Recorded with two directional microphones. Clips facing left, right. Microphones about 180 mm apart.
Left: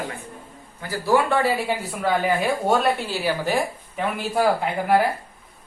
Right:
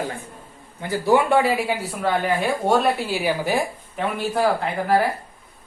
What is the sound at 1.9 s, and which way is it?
Speech, centre (ahead or behind).